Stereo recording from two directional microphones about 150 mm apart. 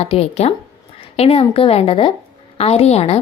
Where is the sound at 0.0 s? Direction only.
40° left (ahead or behind).